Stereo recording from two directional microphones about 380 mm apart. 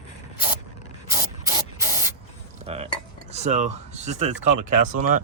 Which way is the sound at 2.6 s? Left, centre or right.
Centre.